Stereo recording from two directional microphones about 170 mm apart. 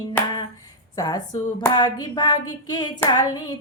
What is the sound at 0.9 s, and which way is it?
A woman's voice, 20° left (ahead or behind).